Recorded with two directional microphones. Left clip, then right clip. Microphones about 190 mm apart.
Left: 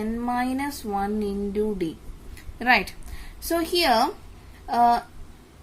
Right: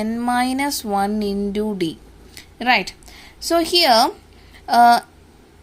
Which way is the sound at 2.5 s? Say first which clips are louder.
Right 3 dB; 20° right (ahead or behind).